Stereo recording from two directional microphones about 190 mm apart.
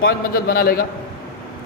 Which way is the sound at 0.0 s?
50° left (ahead or behind).